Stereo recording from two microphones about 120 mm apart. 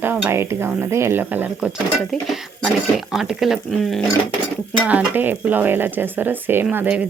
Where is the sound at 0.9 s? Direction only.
20° right (ahead or behind).